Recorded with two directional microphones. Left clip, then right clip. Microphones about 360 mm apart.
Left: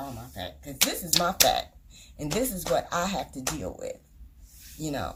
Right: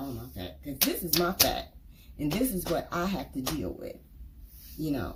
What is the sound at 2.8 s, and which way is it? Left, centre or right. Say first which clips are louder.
Speech: left 4 dB; centre.